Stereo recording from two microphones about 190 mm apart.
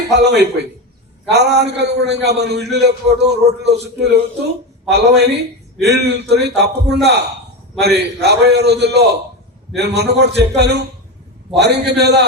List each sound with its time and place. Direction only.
0.1 s a man's voice: 65° right (ahead or behind)